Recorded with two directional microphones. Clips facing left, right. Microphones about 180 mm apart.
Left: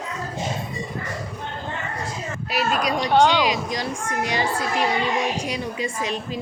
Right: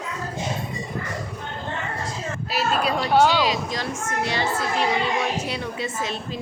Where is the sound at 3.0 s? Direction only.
5° right (ahead or behind).